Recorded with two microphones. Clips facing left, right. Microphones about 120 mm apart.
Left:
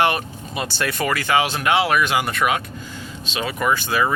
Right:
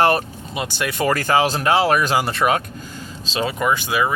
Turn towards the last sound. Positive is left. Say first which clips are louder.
# even
turn(degrees=-15)  # may be behind; listen again after turning